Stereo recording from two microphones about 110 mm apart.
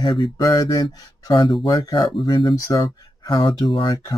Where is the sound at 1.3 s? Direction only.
55° left (ahead or behind).